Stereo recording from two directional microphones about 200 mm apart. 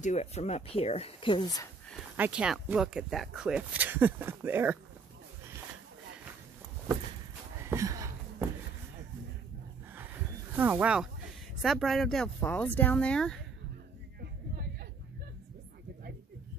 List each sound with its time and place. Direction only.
0.0 s speech: 35° left (ahead or behind)
2.1 s speech: 5° right (ahead or behind)
7.6 s a sound: 15° right (ahead or behind)
10.5 s speech: 10° right (ahead or behind)